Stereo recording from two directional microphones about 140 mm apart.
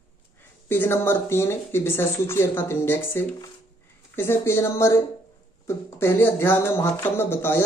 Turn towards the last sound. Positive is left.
turn(degrees=15)  # may be behind; listen again after turning